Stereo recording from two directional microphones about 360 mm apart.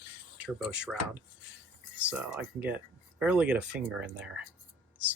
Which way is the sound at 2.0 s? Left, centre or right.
Centre.